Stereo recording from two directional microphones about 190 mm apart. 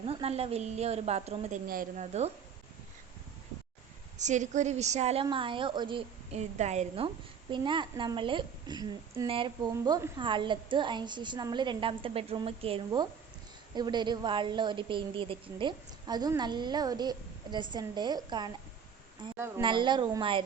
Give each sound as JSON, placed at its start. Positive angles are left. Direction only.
{"t": 0.0, "sound": "a woman's voice", "side_deg": -30}
{"t": 1.6, "sound": "a woman's voice", "side_deg": -50}
{"t": 4.2, "sound": "a woman's voice", "side_deg": -40}